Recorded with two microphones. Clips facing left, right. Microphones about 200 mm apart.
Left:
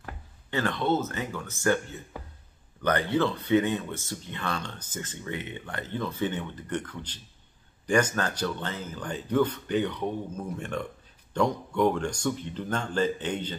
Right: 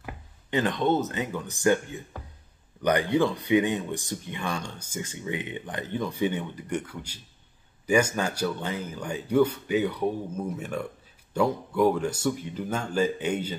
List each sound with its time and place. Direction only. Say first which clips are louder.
0.0 s speech: right 2 dB; 15° right (ahead or behind)